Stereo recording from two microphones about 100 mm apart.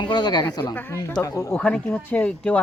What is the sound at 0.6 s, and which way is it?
Speech, 20° left (ahead or behind).